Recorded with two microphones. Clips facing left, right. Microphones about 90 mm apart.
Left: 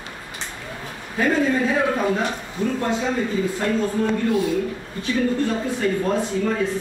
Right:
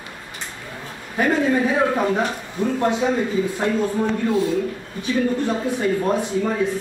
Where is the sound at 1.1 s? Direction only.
15° right (ahead or behind).